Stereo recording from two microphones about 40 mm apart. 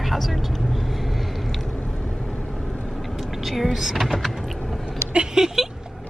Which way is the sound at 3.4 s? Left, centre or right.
Centre.